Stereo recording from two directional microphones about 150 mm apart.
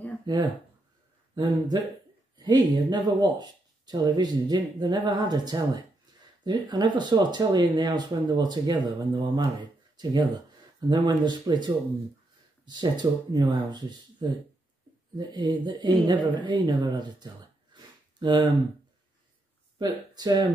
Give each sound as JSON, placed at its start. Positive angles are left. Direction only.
{"t": 1.3, "sound": "speech", "side_deg": -30}
{"t": 15.1, "sound": "speech", "side_deg": -30}
{"t": 17.7, "sound": "a sound", "side_deg": -30}
{"t": 19.8, "sound": "speech", "side_deg": -25}